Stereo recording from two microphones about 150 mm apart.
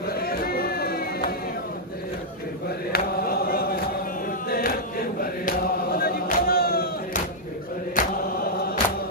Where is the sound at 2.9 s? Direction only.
85° left.